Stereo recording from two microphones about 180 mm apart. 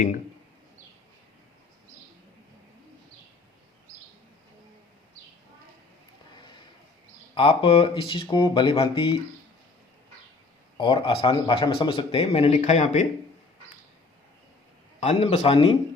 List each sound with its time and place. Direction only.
7.3 s speech: 30° left (ahead or behind)
10.8 s speech: 25° left (ahead or behind)
15.0 s speech: 35° left (ahead or behind)